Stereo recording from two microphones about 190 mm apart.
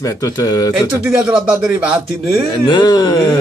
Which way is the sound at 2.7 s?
20° left (ahead or behind).